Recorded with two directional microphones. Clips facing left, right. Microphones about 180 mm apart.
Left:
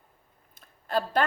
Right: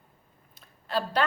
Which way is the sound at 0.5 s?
50° left (ahead or behind).